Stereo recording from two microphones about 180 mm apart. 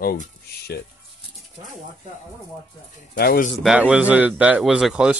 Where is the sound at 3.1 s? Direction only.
55° left (ahead or behind).